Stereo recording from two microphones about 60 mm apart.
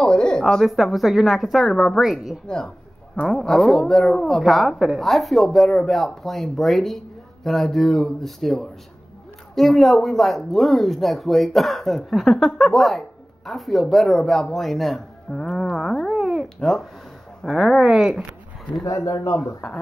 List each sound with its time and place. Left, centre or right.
0.0 s speech: centre
2.4 s speech: centre
3.3 s speech: centre
16.1 s a sound: centre
16.5 s speech: centre
18.9 s speech: left